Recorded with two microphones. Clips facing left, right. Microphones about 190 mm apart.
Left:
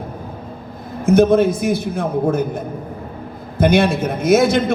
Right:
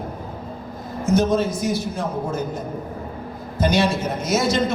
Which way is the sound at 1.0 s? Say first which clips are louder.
Left 7 dB; 55° left (ahead or behind).